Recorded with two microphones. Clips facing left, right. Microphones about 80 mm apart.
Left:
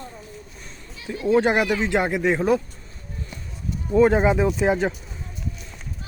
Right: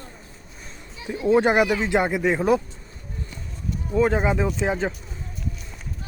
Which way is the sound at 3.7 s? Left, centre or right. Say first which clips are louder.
Left 4 dB; centre.